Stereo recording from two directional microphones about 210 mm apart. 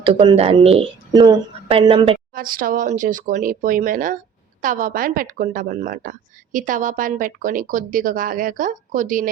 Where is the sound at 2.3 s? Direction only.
40° right (ahead or behind).